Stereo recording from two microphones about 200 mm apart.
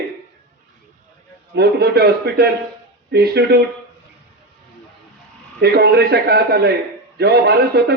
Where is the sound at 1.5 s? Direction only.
55° right (ahead or behind).